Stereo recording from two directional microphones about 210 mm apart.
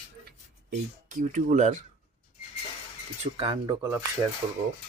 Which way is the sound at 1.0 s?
40° right (ahead or behind).